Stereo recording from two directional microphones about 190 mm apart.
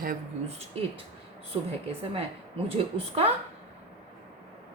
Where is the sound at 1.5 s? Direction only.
25° right (ahead or behind).